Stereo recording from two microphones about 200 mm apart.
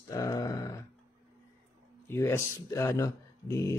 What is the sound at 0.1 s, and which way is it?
Grunt, 15° left (ahead or behind).